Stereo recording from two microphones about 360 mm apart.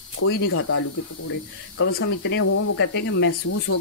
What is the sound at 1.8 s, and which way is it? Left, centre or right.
Speech, left.